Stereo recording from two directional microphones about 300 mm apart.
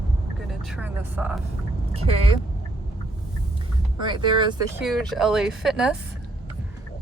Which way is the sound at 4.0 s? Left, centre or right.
Centre.